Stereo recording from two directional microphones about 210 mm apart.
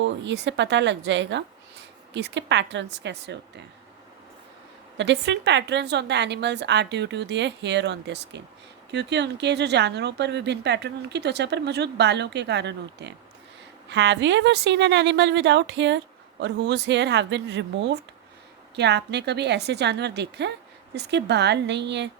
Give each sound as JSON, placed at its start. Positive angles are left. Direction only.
{"t": 0.0, "sound": "a woman's voice", "side_deg": -55}
{"t": 4.9, "sound": "a woman's voice", "side_deg": -55}